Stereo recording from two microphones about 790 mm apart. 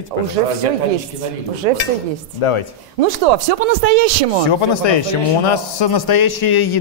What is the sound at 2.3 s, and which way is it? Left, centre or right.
Speech, left.